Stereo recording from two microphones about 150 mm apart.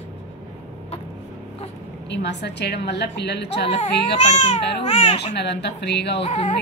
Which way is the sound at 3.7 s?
50° left (ahead or behind).